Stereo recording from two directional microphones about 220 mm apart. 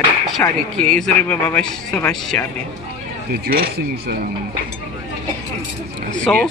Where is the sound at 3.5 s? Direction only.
45° right (ahead or behind).